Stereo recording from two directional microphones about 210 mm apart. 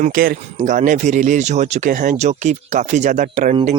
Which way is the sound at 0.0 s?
40° right (ahead or behind).